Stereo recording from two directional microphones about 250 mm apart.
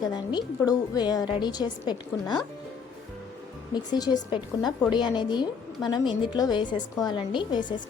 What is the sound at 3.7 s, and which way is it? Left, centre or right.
A woman's voice, centre.